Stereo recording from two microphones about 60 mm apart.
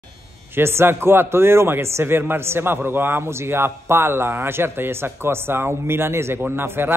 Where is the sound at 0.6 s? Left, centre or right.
Right.